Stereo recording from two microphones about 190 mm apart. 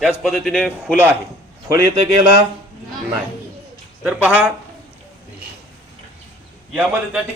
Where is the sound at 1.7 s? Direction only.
20° right (ahead or behind).